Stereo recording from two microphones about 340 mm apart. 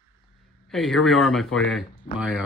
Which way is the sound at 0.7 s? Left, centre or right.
Centre.